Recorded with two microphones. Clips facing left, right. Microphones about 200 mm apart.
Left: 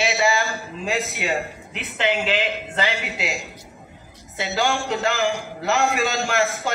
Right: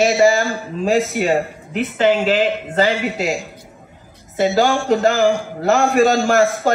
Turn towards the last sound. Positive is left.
turn(degrees=-40)  # may be behind; listen again after turning